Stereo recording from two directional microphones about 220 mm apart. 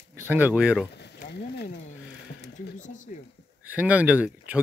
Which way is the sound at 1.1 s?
45° left (ahead or behind).